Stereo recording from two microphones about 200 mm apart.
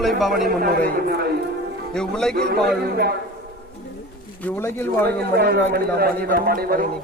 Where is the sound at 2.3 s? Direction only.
50° right (ahead or behind).